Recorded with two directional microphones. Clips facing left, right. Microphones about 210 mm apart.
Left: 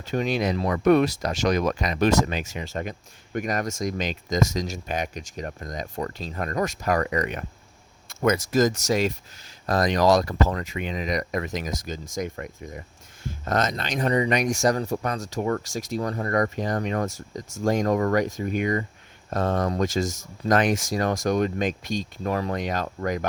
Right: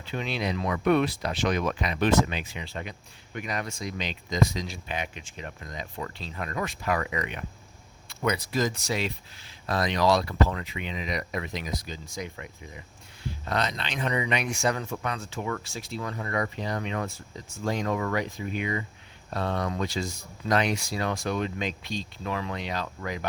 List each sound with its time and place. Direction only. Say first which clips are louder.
0.0 s speech: left 6 dB; 45° left (ahead or behind)